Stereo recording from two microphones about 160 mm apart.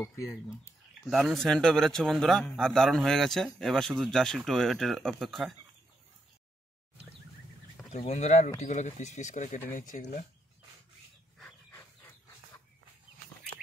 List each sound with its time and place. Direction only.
0.0 s speech: 20° left (ahead or behind)
1.1 s a man's voice: centre (ahead or behind)
7.9 s speech: 45° left (ahead or behind)